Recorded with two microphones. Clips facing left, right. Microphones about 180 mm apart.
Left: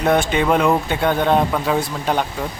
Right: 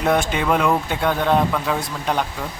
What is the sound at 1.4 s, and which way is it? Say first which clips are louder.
Speech: left 1 dB; 15° left (ahead or behind).